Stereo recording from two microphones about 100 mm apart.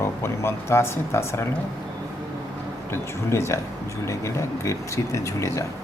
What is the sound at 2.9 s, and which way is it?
Speech, 25° left (ahead or behind).